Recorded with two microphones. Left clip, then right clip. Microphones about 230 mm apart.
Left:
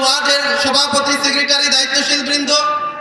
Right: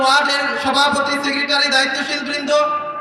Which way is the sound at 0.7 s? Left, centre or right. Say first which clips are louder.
Left 1 dB; right.